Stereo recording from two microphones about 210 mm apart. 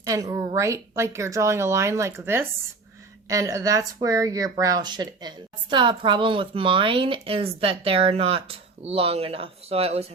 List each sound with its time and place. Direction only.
0.0 s a woman's voice: 15° right (ahead or behind)